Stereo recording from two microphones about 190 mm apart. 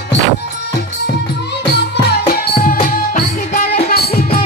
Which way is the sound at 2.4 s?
50° left (ahead or behind).